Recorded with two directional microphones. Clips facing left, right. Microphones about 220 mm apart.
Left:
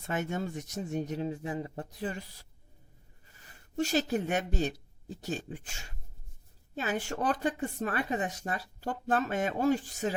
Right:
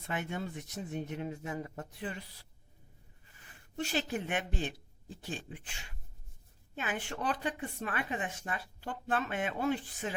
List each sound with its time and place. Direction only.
0.1 s speech: 45° left (ahead or behind)
3.8 s speech: 40° left (ahead or behind)